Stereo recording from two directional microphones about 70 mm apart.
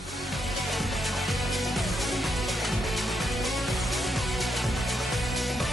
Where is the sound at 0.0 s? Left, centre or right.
Centre.